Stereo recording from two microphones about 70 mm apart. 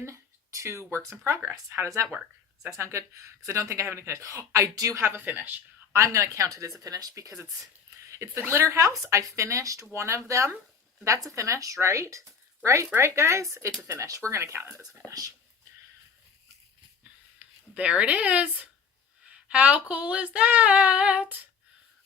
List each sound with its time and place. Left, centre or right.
0.0 s a sound: right
1.7 s speech: right
5.2 s speech: right
5.9 s speech: right
17.7 s speech: centre
19.3 s female singing: centre